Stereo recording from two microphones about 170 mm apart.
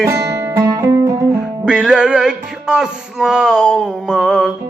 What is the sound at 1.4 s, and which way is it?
Music, 5° right (ahead or behind).